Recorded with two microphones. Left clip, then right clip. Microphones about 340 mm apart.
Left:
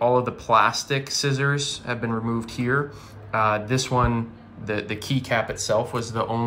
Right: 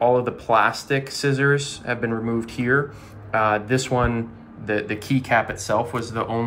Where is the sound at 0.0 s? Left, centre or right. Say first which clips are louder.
Right 2 dB; centre.